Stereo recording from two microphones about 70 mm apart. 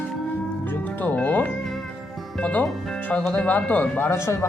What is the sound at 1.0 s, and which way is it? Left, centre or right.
Speech, left.